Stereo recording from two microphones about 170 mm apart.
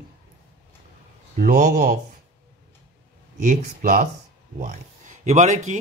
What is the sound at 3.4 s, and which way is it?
Speech, 55° right (ahead or behind).